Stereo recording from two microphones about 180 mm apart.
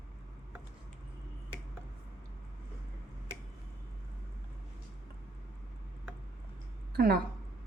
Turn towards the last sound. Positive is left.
turn(degrees=-55)  # may be behind; listen again after turning